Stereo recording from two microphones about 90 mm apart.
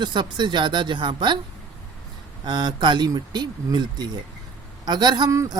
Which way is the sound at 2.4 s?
55° right (ahead or behind).